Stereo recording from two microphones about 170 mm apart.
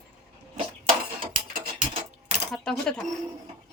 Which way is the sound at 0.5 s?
45° right (ahead or behind).